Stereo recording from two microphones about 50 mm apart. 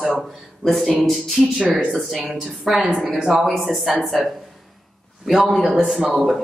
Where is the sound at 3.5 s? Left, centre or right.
Centre.